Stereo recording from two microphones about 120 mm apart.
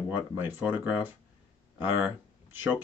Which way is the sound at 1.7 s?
15° right (ahead or behind).